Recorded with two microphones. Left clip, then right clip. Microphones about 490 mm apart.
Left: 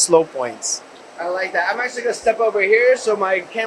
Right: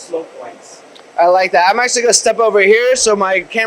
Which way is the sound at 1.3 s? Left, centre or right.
Right.